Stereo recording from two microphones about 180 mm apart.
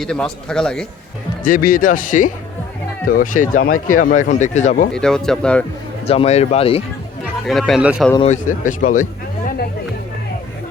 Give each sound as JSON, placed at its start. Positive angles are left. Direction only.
{"t": 0.0, "sound": "speech", "side_deg": 5}
{"t": 1.5, "sound": "speech", "side_deg": 50}
{"t": 4.9, "sound": "speech", "side_deg": 5}
{"t": 6.1, "sound": "speech", "side_deg": 35}
{"t": 7.4, "sound": "speech", "side_deg": 0}
{"t": 8.2, "sound": "speech", "side_deg": 45}